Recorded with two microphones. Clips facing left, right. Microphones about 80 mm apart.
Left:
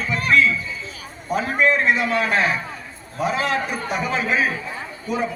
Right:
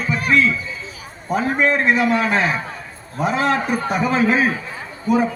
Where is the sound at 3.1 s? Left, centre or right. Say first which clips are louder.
Right 3 dB; right.